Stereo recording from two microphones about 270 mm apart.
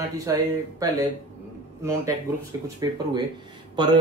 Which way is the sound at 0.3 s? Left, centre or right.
Centre.